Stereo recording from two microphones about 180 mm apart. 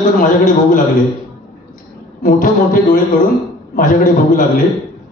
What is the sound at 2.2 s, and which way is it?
A man's voice, 50° left (ahead or behind).